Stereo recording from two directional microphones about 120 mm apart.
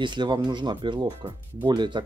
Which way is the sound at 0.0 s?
40° right (ahead or behind).